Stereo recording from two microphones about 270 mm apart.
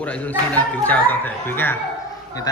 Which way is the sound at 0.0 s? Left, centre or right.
Centre.